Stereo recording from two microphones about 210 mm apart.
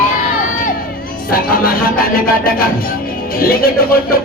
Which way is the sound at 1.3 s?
45° left (ahead or behind).